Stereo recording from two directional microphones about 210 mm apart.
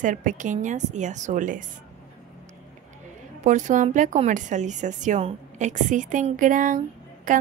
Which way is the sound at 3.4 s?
35° right (ahead or behind).